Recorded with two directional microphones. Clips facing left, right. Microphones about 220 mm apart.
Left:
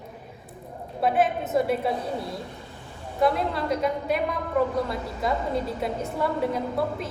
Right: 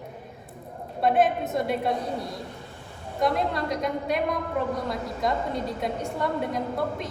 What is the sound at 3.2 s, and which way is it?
A woman's voice, 5° left (ahead or behind).